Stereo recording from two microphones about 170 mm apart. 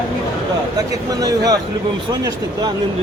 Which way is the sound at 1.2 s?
20° right (ahead or behind).